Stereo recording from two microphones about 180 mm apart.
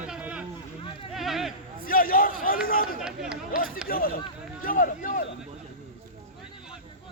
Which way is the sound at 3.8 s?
55° left (ahead or behind).